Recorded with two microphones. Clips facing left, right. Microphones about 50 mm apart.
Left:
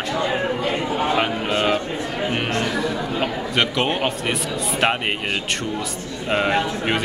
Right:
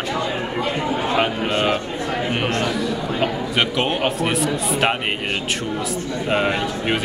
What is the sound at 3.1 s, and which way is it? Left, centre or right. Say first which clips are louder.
A man's voice: right 2 dB; centre.